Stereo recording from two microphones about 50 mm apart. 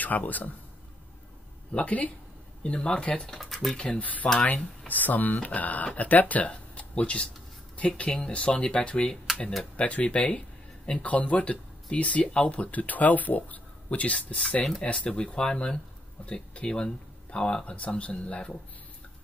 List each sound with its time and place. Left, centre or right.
0.0 s speech: left
1.7 s speech: left
3.3 s speech: centre
3.7 s speech: centre
4.5 s speech: left